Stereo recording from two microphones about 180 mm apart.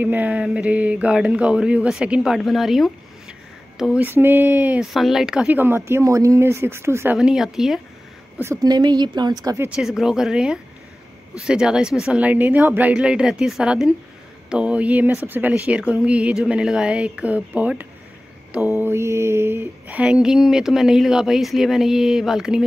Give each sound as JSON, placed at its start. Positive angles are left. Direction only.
{"t": 0.0, "sound": "speech", "side_deg": -10}
{"t": 7.2, "sound": "mantra", "side_deg": 0}
{"t": 8.4, "sound": "speech", "side_deg": -20}
{"t": 9.7, "sound": "mantra", "side_deg": 0}
{"t": 14.5, "sound": "speech", "side_deg": -5}
{"t": 18.8, "sound": "mantra", "side_deg": -15}